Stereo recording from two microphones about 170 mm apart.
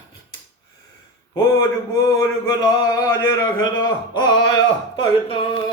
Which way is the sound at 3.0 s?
15° left (ahead or behind).